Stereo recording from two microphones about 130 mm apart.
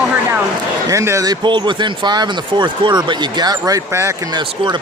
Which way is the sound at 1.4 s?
35° right (ahead or behind).